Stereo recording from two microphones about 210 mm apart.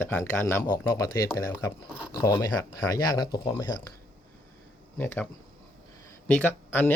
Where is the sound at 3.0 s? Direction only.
20° left (ahead or behind).